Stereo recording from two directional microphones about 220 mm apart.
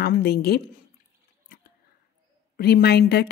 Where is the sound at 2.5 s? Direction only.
45° left (ahead or behind).